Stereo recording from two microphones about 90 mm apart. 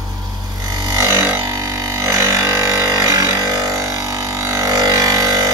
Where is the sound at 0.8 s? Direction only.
45° right (ahead or behind).